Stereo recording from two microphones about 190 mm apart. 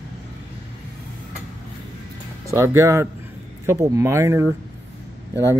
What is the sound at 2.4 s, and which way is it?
Speech, 15° right (ahead or behind).